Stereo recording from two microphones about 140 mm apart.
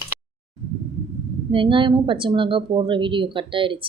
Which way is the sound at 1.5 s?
35° right (ahead or behind).